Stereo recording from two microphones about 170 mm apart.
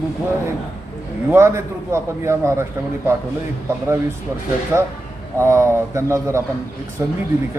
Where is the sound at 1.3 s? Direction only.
15° right (ahead or behind).